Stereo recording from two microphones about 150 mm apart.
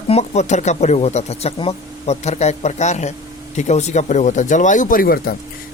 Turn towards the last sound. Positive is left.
turn(degrees=75)  # may be behind; listen again after turning